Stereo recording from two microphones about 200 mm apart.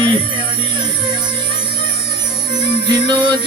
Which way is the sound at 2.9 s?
25° right (ahead or behind).